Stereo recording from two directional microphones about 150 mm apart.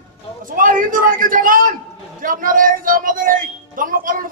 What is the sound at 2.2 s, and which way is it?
Music, 65° right (ahead or behind).